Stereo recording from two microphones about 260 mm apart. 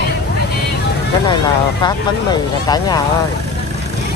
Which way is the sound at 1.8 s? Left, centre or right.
Centre.